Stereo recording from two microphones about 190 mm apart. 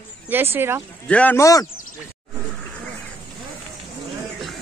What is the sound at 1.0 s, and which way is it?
Speech, 5° left (ahead or behind).